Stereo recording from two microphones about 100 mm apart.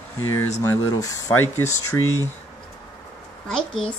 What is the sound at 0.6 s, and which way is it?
Speech, 30° left (ahead or behind).